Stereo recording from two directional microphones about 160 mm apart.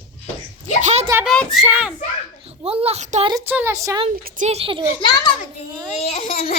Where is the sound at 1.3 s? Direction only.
Centre (ahead or behind).